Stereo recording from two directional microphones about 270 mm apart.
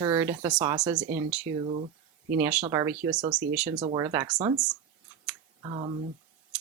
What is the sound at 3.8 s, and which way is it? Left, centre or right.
Speech, centre.